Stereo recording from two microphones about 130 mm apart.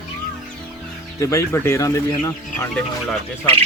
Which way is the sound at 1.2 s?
20° left (ahead or behind).